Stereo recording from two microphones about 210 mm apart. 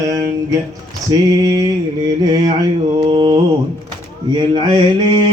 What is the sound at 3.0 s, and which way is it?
Mantra, 20° right (ahead or behind).